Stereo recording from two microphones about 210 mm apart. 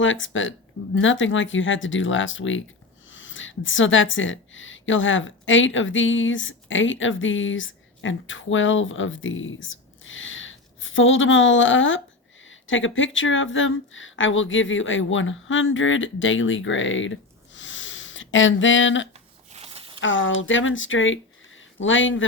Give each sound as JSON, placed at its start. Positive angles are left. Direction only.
{"t": 0.0, "sound": "speech", "side_deg": 65}
{"t": 19.5, "sound": "a sound", "side_deg": -30}
{"t": 20.0, "sound": "speech", "side_deg": 65}